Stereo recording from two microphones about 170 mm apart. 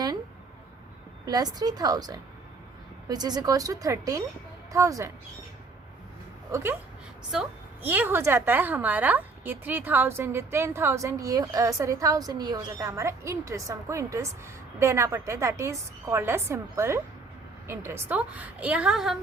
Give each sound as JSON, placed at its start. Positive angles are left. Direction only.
{"t": 1.2, "sound": "a woman's voice", "side_deg": -20}
{"t": 6.5, "sound": "a woman's voice", "side_deg": -15}